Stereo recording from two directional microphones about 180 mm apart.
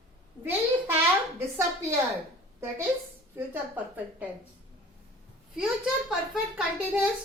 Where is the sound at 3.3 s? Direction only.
10° right (ahead or behind).